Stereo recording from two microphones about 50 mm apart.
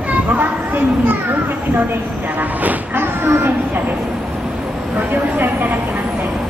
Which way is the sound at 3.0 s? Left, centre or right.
Right.